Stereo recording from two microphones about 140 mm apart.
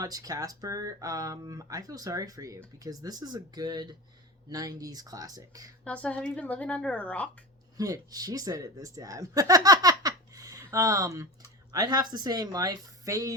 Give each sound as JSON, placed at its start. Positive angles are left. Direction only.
{"t": 0.0, "sound": "speech", "side_deg": -25}
{"t": 5.8, "sound": "a woman's voice", "side_deg": 10}
{"t": 7.8, "sound": "speech", "side_deg": -25}